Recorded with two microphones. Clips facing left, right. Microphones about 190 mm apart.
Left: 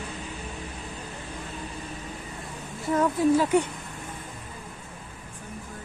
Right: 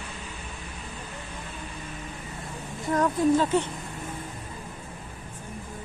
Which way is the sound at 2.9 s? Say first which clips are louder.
Left 1 dB; 5° left (ahead or behind).